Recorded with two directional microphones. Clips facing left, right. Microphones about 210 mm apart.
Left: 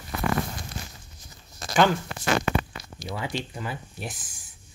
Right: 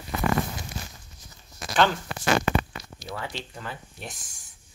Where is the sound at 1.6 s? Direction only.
30° left (ahead or behind).